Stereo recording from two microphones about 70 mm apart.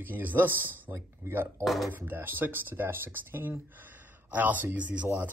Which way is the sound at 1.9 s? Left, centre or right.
Right.